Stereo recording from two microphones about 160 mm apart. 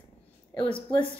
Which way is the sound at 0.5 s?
30° left (ahead or behind).